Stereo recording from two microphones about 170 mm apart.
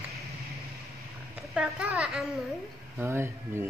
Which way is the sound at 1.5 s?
5° right (ahead or behind).